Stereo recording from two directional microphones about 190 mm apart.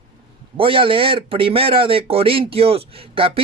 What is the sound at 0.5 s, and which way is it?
Speech, 25° right (ahead or behind).